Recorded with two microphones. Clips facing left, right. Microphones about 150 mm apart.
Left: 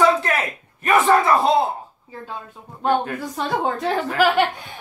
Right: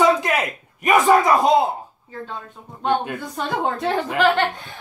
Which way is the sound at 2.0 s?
5° left (ahead or behind).